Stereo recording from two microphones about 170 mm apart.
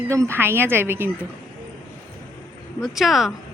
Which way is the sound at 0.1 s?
15° right (ahead or behind).